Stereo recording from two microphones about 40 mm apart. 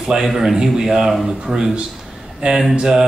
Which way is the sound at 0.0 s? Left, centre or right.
Centre.